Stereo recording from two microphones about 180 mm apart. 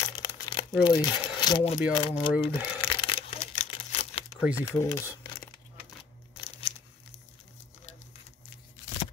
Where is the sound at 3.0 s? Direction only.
35° left (ahead or behind).